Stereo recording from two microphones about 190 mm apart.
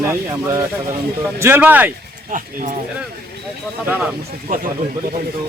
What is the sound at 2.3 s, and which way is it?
Speech, 45° right (ahead or behind).